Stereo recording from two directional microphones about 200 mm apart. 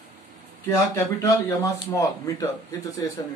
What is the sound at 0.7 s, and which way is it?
Speech, 10° left (ahead or behind).